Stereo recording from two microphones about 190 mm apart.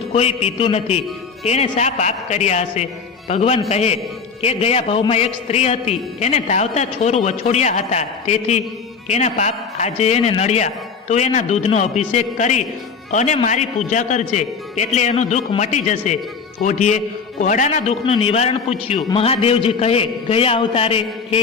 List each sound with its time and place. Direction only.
0.1 s a man's voice: 35° left (ahead or behind)